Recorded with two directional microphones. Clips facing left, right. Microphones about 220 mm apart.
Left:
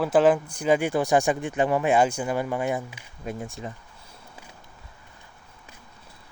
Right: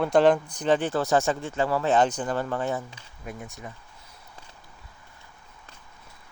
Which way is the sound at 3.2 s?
30° left (ahead or behind).